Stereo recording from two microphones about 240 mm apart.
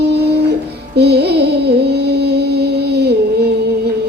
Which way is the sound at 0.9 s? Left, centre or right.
Right.